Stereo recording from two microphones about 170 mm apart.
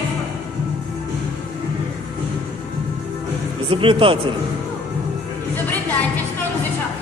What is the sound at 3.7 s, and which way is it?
Speech, 30° right (ahead or behind).